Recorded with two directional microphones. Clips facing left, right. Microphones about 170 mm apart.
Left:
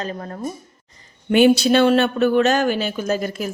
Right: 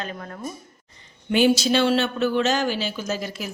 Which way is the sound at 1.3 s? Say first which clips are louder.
Left 5 dB; 60° left (ahead or behind).